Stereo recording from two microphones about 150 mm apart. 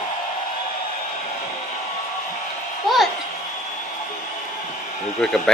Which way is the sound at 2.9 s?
Centre (ahead or behind).